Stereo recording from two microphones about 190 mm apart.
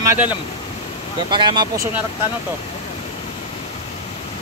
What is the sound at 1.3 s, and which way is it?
Speech, 25° right (ahead or behind).